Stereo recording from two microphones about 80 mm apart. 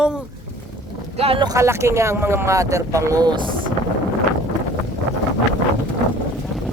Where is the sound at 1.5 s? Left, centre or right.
Right.